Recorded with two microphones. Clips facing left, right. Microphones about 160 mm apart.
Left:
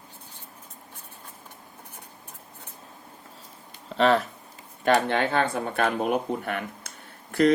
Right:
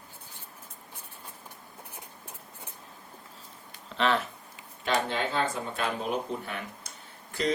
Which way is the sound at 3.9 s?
40° left (ahead or behind).